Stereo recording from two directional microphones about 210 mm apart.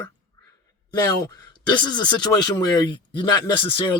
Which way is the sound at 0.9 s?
15° left (ahead or behind).